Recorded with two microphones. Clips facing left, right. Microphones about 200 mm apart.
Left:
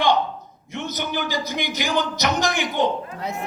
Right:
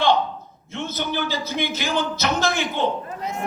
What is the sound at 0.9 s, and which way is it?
A man's voice, 15° left (ahead or behind).